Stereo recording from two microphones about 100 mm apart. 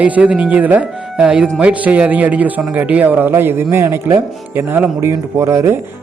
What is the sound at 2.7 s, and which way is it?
Music, 15° right (ahead or behind).